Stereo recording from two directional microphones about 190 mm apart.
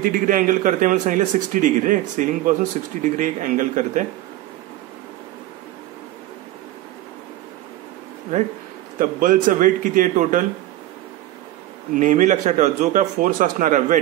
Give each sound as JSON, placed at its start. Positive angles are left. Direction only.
{"t": 0.0, "sound": "a man's voice", "side_deg": -45}
{"t": 8.9, "sound": "a man's voice", "side_deg": -45}
{"t": 11.9, "sound": "speech", "side_deg": -40}